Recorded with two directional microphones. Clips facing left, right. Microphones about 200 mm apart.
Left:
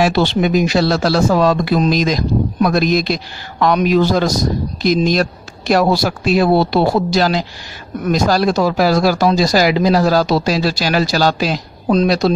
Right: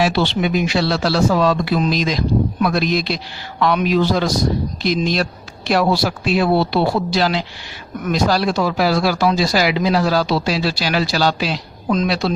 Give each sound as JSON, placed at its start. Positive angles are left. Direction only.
{"t": 0.0, "sound": "speech", "side_deg": 45}